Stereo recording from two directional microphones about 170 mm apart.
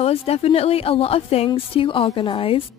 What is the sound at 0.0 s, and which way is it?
A woman's voice, 35° left (ahead or behind).